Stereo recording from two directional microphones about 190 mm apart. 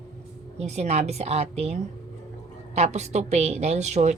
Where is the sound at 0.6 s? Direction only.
35° right (ahead or behind).